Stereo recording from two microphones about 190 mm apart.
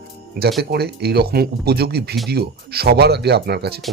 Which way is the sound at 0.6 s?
60° right (ahead or behind).